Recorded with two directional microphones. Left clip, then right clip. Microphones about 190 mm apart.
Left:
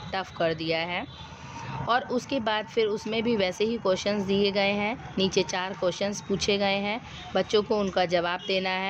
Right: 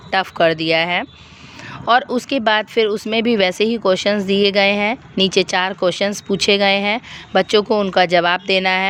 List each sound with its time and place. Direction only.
0.1 s speech: 40° right (ahead or behind)